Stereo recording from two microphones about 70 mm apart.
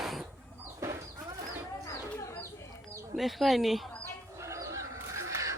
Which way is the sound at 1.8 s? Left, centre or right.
Left.